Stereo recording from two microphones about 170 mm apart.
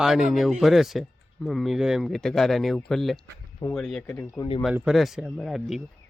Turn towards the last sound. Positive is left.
turn(degrees=0)  # may be behind; listen again after turning